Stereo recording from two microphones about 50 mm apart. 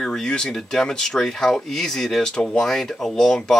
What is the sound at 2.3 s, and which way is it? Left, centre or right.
Speech, centre.